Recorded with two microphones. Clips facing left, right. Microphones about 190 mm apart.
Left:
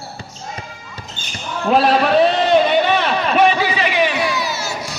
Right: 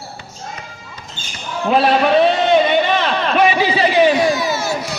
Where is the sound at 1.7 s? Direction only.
Centre (ahead or behind).